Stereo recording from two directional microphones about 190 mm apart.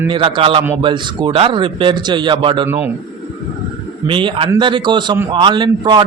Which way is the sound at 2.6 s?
10° right (ahead or behind).